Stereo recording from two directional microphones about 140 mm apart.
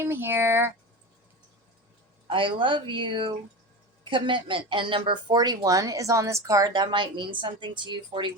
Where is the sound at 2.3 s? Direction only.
35° right (ahead or behind).